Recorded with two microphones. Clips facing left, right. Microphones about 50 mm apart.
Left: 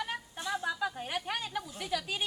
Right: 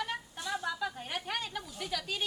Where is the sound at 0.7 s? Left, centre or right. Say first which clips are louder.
Left 2 dB; centre.